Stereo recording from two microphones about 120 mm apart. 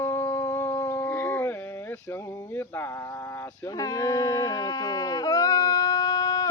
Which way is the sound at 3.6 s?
30° left (ahead or behind).